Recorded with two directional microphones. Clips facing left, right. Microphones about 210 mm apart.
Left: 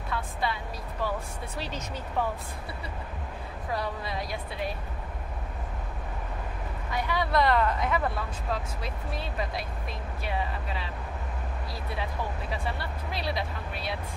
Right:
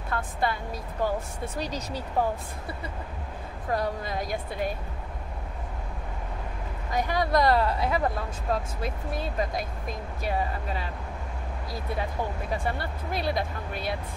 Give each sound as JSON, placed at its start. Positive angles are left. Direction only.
{"t": 0.1, "sound": "speech", "side_deg": -50}
{"t": 1.6, "sound": "speech", "side_deg": -35}
{"t": 3.7, "sound": "speech", "side_deg": -45}
{"t": 6.9, "sound": "speech", "side_deg": -45}
{"t": 12.0, "sound": "speech", "side_deg": -50}